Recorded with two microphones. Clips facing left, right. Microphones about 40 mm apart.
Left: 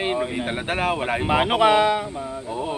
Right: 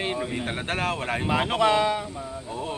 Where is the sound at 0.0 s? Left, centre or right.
Centre.